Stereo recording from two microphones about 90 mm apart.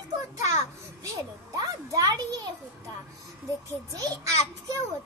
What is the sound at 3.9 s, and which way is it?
Speech, 40° right (ahead or behind).